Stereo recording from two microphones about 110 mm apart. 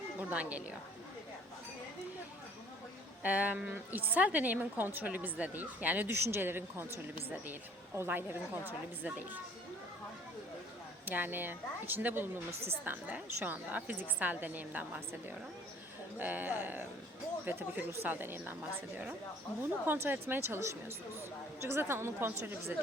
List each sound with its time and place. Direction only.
0.2 s speech: 15° right (ahead or behind)
3.2 s a woman's voice: 15° right (ahead or behind)
11.0 s a woman's voice: 15° right (ahead or behind)
16.1 s a woman's voice: 15° right (ahead or behind)
19.8 s speech: 20° right (ahead or behind)